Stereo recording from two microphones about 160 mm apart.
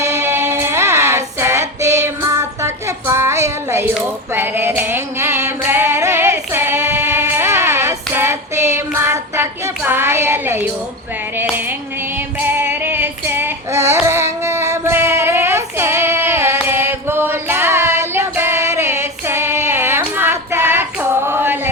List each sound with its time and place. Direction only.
0.0 s child singing: 15° right (ahead or behind)
3.9 s a sound: 15° right (ahead or behind)
12.5 s female singing: 15° right (ahead or behind)
14.0 s child singing: 15° right (ahead or behind)